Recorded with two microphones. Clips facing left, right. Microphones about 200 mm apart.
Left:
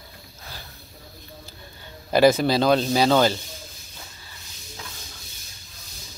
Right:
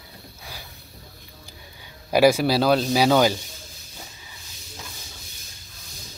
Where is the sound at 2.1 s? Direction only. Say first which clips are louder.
Even; 10° right (ahead or behind).